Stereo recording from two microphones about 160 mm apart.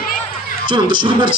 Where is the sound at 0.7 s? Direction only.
30° right (ahead or behind).